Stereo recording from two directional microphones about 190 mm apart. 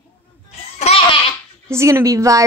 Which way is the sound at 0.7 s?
35° left (ahead or behind).